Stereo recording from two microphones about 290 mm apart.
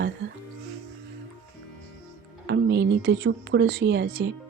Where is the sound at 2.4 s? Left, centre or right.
Right.